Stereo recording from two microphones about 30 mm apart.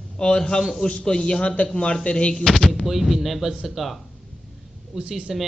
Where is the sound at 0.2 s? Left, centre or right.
Left.